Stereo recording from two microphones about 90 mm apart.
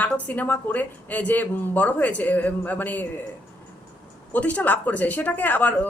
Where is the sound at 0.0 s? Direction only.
15° left (ahead or behind).